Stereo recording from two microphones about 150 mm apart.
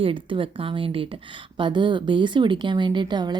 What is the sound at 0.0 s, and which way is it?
A woman's voice, 35° right (ahead or behind).